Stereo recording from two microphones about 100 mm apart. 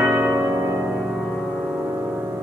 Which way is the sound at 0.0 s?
10° right (ahead or behind).